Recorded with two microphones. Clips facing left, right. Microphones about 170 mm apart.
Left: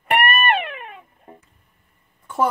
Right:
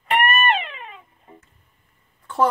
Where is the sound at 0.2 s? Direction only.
60° left (ahead or behind).